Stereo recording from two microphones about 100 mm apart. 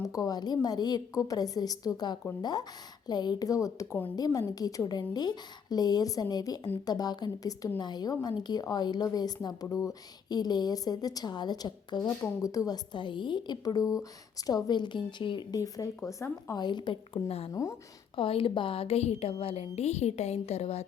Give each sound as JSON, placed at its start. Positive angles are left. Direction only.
{"t": 0.0, "sound": "a woman's voice", "side_deg": 35}
{"t": 12.2, "sound": "a woman's voice", "side_deg": 35}
{"t": 15.5, "sound": "a woman's voice", "side_deg": 35}
{"t": 16.2, "sound": "a woman's voice", "side_deg": 25}
{"t": 16.6, "sound": "a woman's voice", "side_deg": 50}
{"t": 17.2, "sound": "speech", "side_deg": 80}
{"t": 17.5, "sound": "a woman's voice", "side_deg": 30}
{"t": 18.2, "sound": "a woman's voice", "side_deg": 65}